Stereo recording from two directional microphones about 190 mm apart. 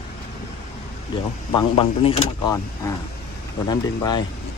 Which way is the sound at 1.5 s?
25° left (ahead or behind).